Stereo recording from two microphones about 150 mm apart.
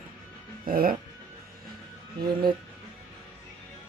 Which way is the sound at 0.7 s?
75° right (ahead or behind).